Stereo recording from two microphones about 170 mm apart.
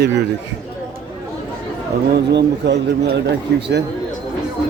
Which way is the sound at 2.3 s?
90° right.